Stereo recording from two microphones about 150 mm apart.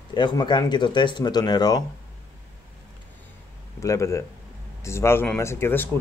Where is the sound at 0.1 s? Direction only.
30° left (ahead or behind).